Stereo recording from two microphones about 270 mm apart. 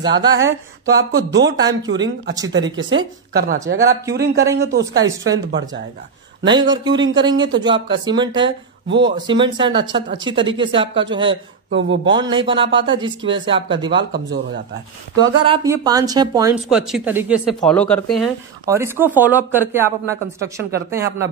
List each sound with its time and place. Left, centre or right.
0.0 s speech: centre
0.4 s a woman's voice: right
1.6 s speech: centre
1.9 s a woman's voice: right
5.0 s speech: centre
6.4 s speech: centre
11.7 s a woman's voice: right
12.1 s speech: centre
14.1 s a man's voice: right
15.1 s speech: centre
16.6 s speech: centre